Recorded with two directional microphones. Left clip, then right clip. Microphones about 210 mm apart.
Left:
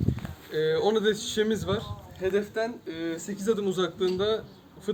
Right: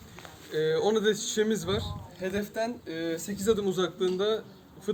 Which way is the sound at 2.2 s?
55° right (ahead or behind).